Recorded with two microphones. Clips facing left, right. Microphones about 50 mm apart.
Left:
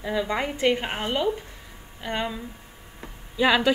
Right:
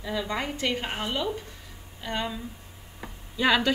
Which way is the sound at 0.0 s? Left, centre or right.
Left.